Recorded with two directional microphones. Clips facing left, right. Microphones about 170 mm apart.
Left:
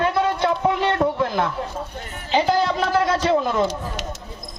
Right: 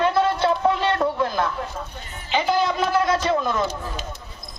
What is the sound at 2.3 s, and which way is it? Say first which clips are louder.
Music: left 2 dB; 35° left (ahead or behind).